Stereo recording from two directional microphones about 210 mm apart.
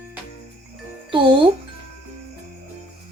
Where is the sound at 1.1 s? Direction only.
25° right (ahead or behind).